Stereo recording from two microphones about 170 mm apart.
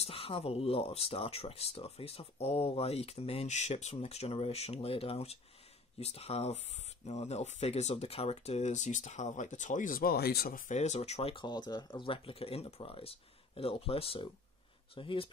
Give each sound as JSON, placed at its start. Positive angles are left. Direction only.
{"t": 0.0, "sound": "speech", "side_deg": 35}